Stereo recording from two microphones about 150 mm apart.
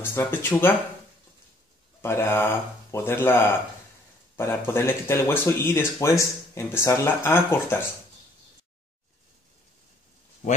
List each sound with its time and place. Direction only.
0.0 s speech: 15° left (ahead or behind)
2.0 s speech: 15° left (ahead or behind)